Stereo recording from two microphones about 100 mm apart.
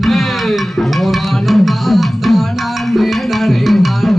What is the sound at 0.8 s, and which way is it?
Music, centre (ahead or behind).